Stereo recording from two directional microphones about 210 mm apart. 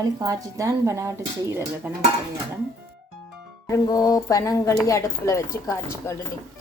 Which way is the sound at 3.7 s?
15° left (ahead or behind).